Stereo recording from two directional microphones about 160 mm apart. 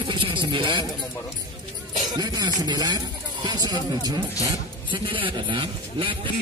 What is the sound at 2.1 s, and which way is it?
A man's voice, 25° right (ahead or behind).